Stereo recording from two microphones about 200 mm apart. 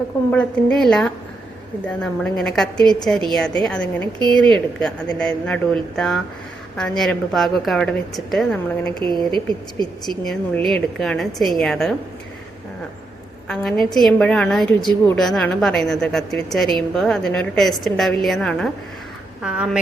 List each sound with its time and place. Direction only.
0.3 s a woman's voice: 5° left (ahead or behind)
9.0 s a woman's voice: 20° right (ahead or behind)
10.1 s a woman's voice: centre (ahead or behind)
13.5 s a woman's voice: centre (ahead or behind)